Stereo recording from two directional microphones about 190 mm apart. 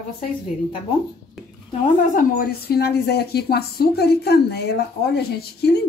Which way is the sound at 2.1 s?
45° left (ahead or behind).